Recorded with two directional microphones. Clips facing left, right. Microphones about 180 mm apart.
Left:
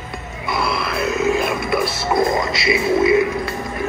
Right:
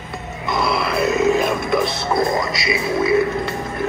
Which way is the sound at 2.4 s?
25° left (ahead or behind).